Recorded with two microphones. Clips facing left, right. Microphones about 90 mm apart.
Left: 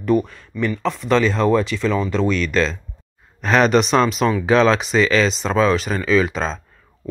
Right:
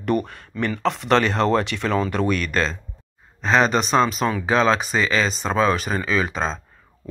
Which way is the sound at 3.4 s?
30° right (ahead or behind).